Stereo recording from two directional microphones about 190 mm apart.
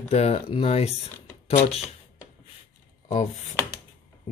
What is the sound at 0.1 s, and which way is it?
Speech, 35° left (ahead or behind).